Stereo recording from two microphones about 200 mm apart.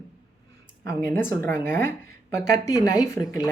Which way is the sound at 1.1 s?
10° left (ahead or behind).